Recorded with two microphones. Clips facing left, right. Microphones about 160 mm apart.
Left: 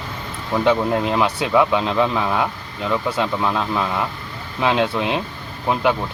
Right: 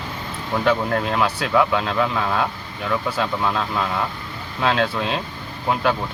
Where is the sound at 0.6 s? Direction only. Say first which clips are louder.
Left 3 dB; 20° left (ahead or behind).